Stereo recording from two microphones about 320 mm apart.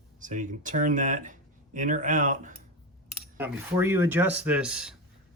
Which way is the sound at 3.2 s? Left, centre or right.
Centre.